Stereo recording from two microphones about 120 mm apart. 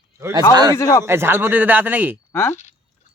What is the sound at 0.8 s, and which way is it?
Speech, 25° left (ahead or behind).